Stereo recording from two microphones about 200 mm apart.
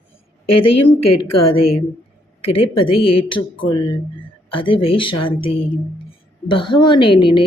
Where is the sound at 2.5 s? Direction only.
25° left (ahead or behind).